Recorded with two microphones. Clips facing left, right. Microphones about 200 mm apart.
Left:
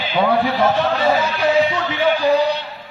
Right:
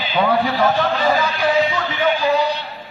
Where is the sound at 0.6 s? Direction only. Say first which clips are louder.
Left 1 dB; 25° left (ahead or behind).